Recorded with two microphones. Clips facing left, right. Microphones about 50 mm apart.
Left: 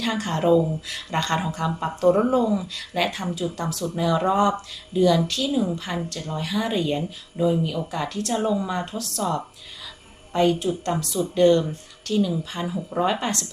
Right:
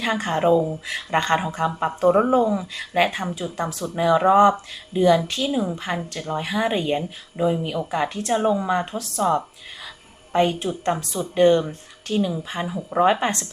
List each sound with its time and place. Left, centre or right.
0.0 s a woman's voice: right